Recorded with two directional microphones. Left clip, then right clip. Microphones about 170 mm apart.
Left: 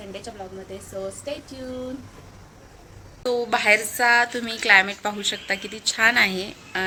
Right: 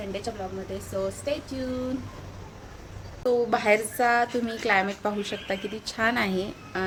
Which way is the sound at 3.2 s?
5° right (ahead or behind).